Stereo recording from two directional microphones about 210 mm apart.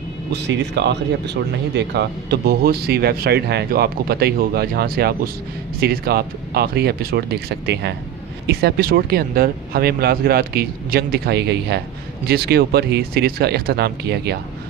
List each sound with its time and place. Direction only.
0.3 s speech: 55° right (ahead or behind)